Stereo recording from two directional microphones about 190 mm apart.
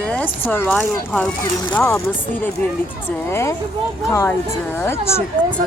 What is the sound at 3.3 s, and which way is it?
Speech, 15° left (ahead or behind).